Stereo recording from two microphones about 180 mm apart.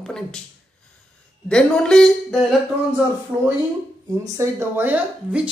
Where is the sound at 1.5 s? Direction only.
5° left (ahead or behind).